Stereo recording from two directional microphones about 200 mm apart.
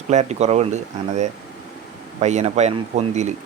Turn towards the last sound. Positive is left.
turn(degrees=-35)  # may be behind; listen again after turning